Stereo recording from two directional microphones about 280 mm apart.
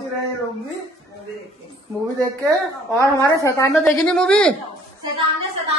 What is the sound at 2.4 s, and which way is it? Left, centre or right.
Speech, centre.